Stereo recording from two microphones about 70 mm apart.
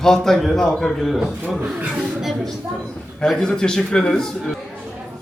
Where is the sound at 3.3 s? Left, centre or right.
Centre.